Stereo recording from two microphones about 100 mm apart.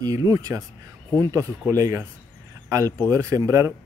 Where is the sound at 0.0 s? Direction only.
35° right (ahead or behind).